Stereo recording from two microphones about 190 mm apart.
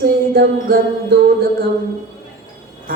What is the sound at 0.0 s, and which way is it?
Music, 55° right (ahead or behind).